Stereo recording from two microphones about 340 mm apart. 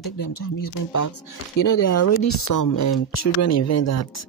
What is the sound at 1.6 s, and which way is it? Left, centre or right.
Speech, left.